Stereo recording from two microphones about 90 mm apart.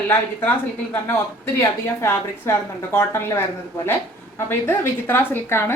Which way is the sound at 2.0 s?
25° left (ahead or behind).